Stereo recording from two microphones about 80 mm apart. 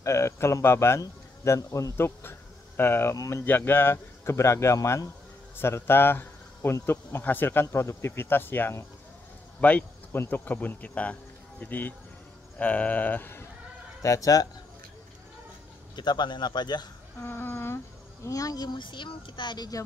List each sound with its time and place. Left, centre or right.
0.0 s speech: left
2.0 s speech: left
3.4 s speech: left
14.0 s speech: left
16.0 s speech: left
17.2 s humming: left
18.2 s speech: left